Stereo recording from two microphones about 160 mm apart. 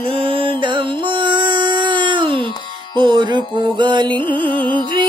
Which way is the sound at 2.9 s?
30° right (ahead or behind).